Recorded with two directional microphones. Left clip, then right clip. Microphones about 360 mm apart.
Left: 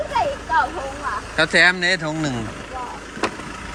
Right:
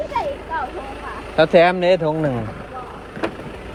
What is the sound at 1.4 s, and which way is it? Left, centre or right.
Speech, centre.